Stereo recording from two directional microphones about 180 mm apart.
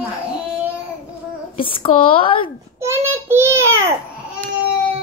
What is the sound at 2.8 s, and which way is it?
Child singing, 15° right (ahead or behind).